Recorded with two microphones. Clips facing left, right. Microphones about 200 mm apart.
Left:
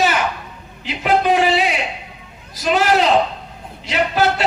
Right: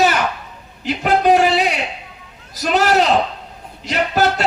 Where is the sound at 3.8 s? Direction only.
45° right (ahead or behind).